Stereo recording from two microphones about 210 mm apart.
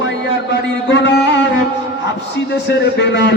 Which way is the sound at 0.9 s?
55° left (ahead or behind).